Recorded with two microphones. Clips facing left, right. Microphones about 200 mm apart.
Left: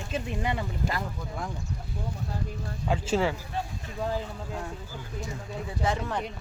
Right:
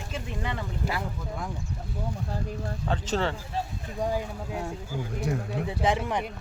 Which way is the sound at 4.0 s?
15° right (ahead or behind).